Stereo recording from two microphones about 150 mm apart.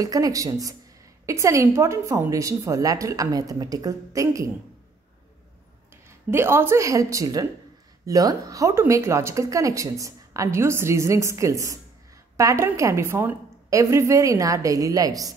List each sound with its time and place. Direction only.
0.0 s speech: 25° right (ahead or behind)
6.3 s speech: 15° right (ahead or behind)